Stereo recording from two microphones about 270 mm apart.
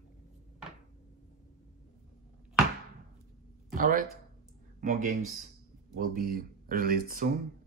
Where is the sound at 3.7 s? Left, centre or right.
Right.